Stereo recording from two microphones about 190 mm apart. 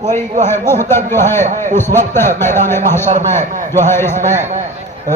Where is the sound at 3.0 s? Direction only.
40° right (ahead or behind).